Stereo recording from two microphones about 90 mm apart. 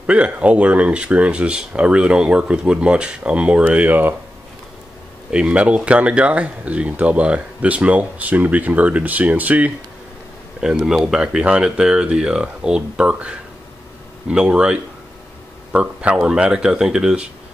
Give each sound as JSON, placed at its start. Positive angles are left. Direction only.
{"t": 0.0, "sound": "speech", "side_deg": -15}
{"t": 5.3, "sound": "speech", "side_deg": -10}